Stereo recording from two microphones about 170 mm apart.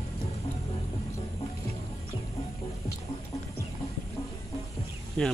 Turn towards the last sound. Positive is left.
turn(degrees=5)  # may be behind; listen again after turning